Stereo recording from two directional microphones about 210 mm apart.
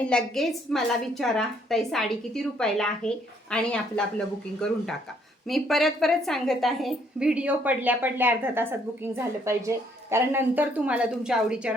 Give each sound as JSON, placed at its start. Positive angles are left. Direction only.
{"t": 0.0, "sound": "a woman's voice", "side_deg": 5}